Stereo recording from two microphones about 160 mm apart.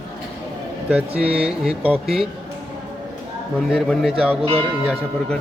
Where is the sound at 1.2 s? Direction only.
5° right (ahead or behind).